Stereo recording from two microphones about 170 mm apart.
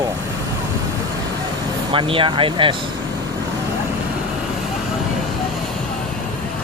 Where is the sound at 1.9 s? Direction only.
30° right (ahead or behind).